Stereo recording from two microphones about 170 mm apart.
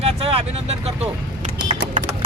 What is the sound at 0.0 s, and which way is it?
Vehicle, 35° right (ahead or behind).